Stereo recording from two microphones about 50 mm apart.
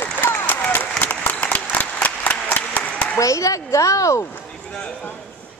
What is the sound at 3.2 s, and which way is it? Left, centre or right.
Speech, left.